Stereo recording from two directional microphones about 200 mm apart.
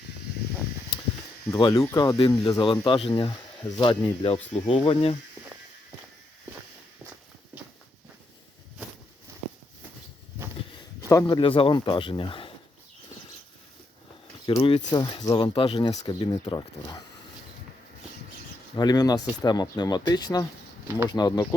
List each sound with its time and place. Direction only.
1.5 s speech: 20° left (ahead or behind)
11.1 s speech: 20° left (ahead or behind)
14.4 s speech: 25° left (ahead or behind)
18.8 s speech: 20° left (ahead or behind)